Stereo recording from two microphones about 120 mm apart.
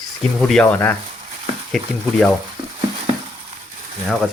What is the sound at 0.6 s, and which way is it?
Speech, 15° left (ahead or behind).